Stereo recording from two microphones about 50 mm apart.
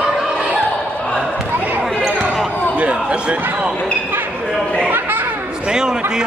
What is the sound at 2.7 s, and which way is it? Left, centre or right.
Basketball bounce, right.